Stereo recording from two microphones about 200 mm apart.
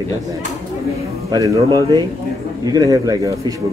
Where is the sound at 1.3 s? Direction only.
20° right (ahead or behind).